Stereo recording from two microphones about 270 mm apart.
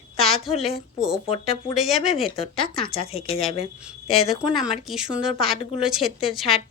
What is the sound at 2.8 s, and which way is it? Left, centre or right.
Speech, left.